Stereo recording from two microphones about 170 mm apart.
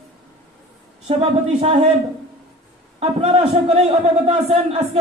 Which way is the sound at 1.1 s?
35° right (ahead or behind).